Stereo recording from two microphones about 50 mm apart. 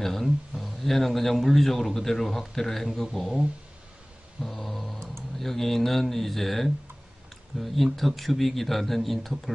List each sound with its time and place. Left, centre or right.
0.0 s speech: centre
4.4 s a sound: centre
5.4 s speech: centre